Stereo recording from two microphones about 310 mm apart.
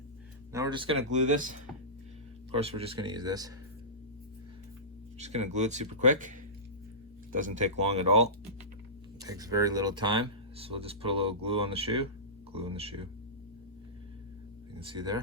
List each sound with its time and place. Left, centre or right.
0.5 s speech: centre
2.6 s speech: centre
5.2 s speech: right
7.3 s speech: right
14.8 s speech: centre